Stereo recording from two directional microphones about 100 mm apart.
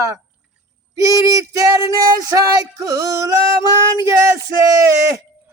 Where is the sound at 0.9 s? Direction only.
30° right (ahead or behind).